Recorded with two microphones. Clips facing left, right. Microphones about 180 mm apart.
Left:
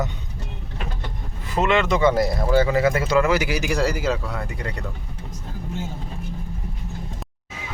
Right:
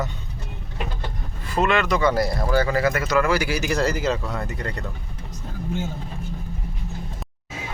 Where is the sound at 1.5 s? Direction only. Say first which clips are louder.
Left 1 dB; 20° left (ahead or behind).